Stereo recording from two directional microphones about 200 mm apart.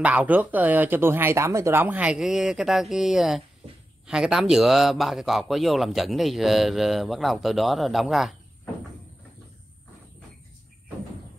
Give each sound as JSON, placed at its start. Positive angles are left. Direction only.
{"t": 0.0, "sound": "a man's voice", "side_deg": -5}